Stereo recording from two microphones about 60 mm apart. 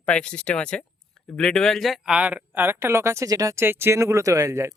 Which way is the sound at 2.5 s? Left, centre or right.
Right.